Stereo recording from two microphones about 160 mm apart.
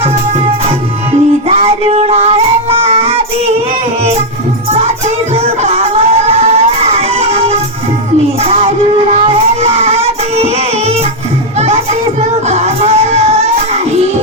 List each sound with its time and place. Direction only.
1.5 s child singing: 40° right (ahead or behind)
5.3 s music: 40° right (ahead or behind)
8.4 s child singing: 40° right (ahead or behind)
12.5 s music: 45° right (ahead or behind)